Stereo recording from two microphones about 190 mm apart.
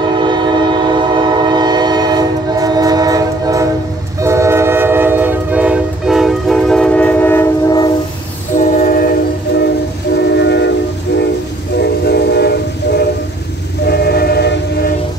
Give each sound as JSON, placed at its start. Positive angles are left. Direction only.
{"t": 0.2, "sound": "train", "side_deg": -25}
{"t": 8.5, "sound": "train", "side_deg": 45}
{"t": 10.3, "sound": "train", "side_deg": 65}
{"t": 12.1, "sound": "train", "side_deg": 60}